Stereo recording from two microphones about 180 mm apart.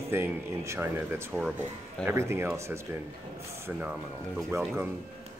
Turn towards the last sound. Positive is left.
turn(degrees=-10)  # may be behind; listen again after turning